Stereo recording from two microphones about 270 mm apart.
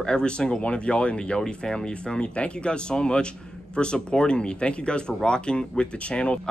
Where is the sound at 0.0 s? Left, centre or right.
Centre.